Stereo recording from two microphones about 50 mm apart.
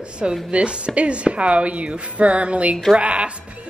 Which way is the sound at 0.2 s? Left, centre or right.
Right.